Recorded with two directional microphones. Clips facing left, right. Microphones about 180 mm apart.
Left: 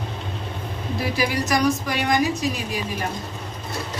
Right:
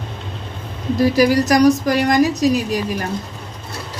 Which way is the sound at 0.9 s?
40° right (ahead or behind).